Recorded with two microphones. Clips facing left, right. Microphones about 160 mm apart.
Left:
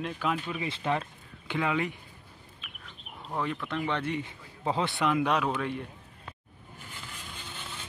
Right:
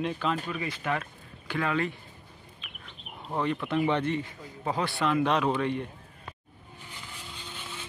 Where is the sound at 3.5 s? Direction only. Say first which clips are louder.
Right 5 dB; 10° right (ahead or behind).